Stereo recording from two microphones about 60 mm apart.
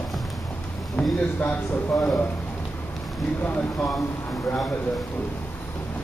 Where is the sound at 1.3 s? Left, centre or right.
Left.